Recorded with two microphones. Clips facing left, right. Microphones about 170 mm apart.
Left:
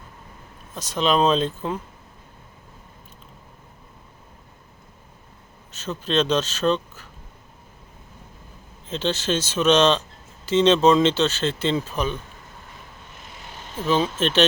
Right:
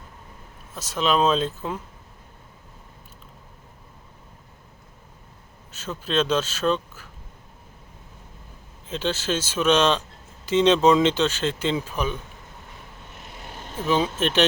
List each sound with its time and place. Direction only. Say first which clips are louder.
0.7 s speech: left 2 dB; 5° right (ahead or behind)
5.7 s speech: left 2 dB; 10° right (ahead or behind)
8.9 s speech: left 2 dB; 10° right (ahead or behind)
13.2 s a sound: right 2 dB; 60° right (ahead or behind)
13.7 s speech: left 1 dB; 15° right (ahead or behind)